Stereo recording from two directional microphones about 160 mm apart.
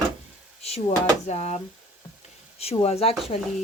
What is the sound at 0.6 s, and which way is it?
Stir, 40° left (ahead or behind).